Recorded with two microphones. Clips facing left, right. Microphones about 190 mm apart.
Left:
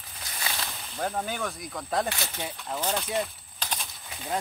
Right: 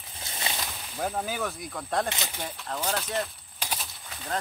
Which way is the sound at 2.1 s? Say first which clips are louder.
Even; 15° right (ahead or behind).